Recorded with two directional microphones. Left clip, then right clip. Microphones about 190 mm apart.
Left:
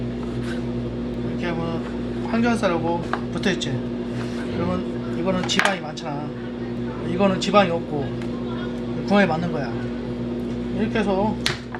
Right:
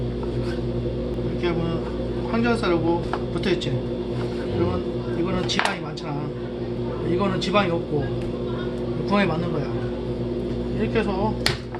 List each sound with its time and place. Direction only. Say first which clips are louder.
7.4 s a man's voice: left 5 dB; 35° left (ahead or behind)
9.0 s a man's voice: left 3 dB; 30° left (ahead or behind)